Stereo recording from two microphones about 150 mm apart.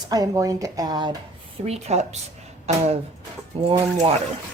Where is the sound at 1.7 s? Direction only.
45° right (ahead or behind).